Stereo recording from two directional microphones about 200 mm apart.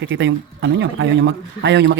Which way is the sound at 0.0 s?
65° right (ahead or behind).